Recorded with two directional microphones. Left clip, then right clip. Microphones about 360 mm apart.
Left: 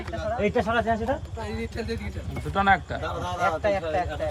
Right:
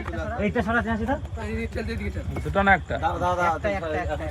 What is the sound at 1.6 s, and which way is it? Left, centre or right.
A man's voice, centre.